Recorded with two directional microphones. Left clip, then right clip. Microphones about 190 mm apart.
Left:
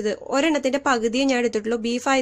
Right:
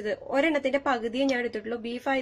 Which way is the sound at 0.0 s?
30° left (ahead or behind).